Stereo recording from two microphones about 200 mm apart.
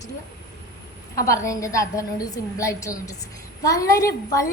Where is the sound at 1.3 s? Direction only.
15° left (ahead or behind).